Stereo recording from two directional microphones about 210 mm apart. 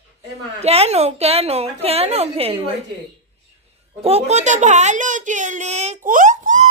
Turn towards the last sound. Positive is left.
turn(degrees=-35)  # may be behind; listen again after turning